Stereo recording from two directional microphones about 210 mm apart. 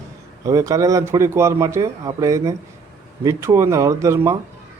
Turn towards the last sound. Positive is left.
turn(degrees=-15)  # may be behind; listen again after turning